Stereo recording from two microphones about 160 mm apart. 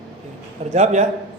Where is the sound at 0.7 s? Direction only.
45° right (ahead or behind).